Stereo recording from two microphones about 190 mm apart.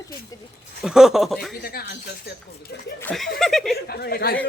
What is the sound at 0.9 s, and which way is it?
Speech, centre (ahead or behind).